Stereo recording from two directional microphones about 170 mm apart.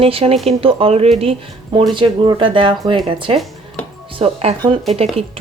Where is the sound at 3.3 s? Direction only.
Centre (ahead or behind).